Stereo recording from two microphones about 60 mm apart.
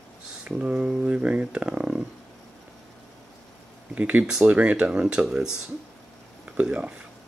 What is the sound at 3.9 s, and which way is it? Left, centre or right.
Speech, right.